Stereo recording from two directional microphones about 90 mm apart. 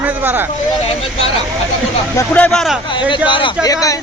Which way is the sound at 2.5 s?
5° left (ahead or behind).